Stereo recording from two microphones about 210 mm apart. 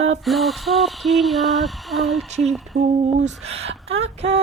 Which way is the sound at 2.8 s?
30° right (ahead or behind).